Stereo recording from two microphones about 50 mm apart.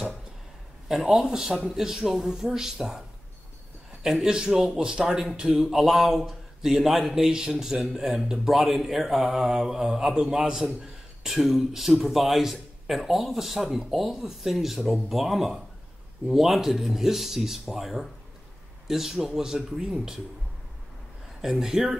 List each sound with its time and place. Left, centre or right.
1.0 s speech: centre
4.0 s speech: centre
21.4 s speech: centre